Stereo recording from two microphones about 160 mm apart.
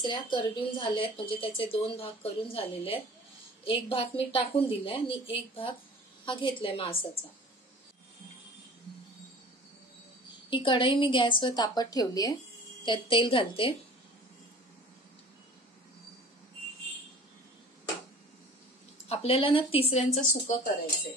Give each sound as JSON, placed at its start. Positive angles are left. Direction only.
{"t": 0.0, "sound": "speech", "side_deg": 30}
{"t": 10.5, "sound": "a woman's voice", "side_deg": 30}
{"t": 19.0, "sound": "speech", "side_deg": 35}